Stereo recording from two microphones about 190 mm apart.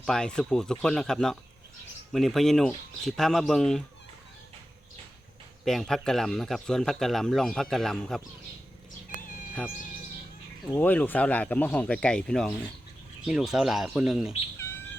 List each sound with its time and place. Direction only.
0.0 s speech: 5° left (ahead or behind)
5.6 s speech: centre (ahead or behind)
9.0 s cat: 45° left (ahead or behind)
10.8 s speech: 10° left (ahead or behind)
14.6 s bird: 10° left (ahead or behind)